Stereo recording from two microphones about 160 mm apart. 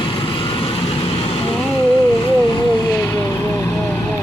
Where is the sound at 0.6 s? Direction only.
35° left (ahead or behind).